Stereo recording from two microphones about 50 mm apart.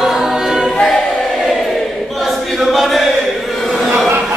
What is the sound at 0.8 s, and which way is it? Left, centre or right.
Choir, centre.